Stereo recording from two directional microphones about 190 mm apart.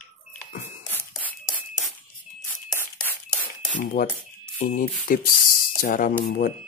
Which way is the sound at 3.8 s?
45° left (ahead or behind).